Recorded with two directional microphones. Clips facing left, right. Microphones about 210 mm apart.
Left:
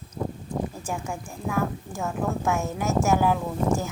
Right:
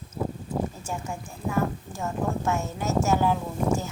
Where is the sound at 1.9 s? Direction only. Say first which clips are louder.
Left 1 dB; 10° left (ahead or behind).